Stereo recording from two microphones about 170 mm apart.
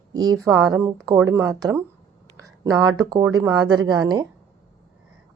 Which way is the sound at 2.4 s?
20° right (ahead or behind).